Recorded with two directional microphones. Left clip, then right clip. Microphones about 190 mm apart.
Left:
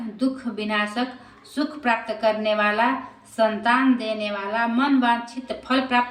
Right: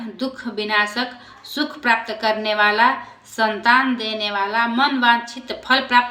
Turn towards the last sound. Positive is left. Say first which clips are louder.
# right 6 dB
turn(degrees=10)  # may be behind; listen again after turning